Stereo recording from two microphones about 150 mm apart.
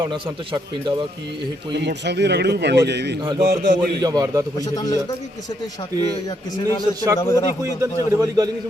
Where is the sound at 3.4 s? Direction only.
70° right (ahead or behind).